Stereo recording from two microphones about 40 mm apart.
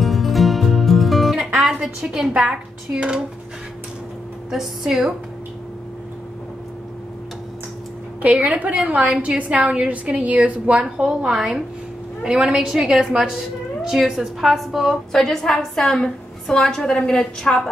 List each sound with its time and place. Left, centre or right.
0.0 s music: centre
1.6 s a sound: centre
2.4 s a woman's voice: right
4.5 s a woman's voice: centre
8.2 s a woman's voice: right
10.8 s a woman's voice: right; by 15.0 s centre
15.1 s a woman's voice: centre; by 17.6 s left